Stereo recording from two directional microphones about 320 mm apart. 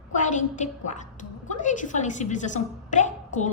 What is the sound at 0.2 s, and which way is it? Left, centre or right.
A woman's voice, left.